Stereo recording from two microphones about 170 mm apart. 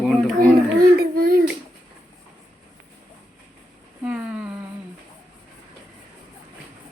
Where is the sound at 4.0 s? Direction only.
5° right (ahead or behind).